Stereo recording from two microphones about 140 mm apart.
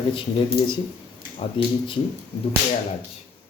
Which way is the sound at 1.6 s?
35° left (ahead or behind).